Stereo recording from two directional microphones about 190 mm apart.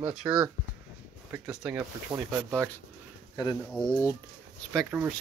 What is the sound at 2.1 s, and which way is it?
Speech, 15° right (ahead or behind).